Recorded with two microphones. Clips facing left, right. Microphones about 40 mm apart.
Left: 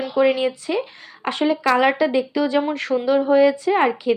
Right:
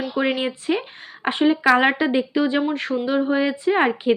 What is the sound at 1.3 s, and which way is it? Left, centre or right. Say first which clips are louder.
A woman's voice: right 2 dB; right.